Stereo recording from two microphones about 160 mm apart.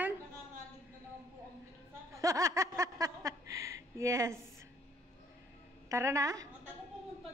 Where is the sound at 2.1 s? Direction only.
20° right (ahead or behind).